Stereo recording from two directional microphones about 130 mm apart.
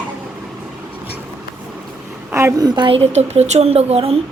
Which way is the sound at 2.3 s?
20° right (ahead or behind).